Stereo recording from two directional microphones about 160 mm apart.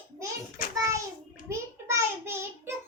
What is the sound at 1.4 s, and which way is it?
Child singing, 15° right (ahead or behind).